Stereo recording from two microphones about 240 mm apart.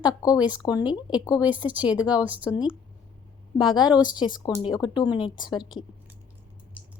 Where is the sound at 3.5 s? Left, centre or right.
Centre.